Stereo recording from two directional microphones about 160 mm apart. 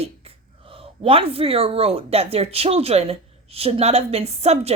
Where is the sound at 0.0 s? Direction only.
35° right (ahead or behind).